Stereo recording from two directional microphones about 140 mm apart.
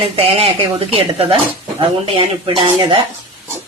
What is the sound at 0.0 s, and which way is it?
Speech, 40° right (ahead or behind).